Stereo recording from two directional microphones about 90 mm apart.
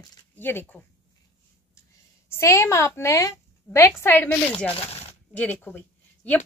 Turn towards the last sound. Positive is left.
turn(degrees=20)  # may be behind; listen again after turning